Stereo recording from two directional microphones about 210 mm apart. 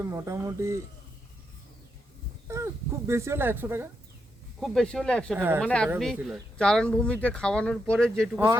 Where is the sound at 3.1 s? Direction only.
15° right (ahead or behind).